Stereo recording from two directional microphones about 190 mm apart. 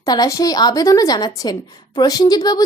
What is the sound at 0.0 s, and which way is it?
A woman's voice, 20° left (ahead or behind).